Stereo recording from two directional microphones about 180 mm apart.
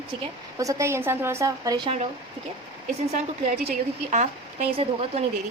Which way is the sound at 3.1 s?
55° right (ahead or behind).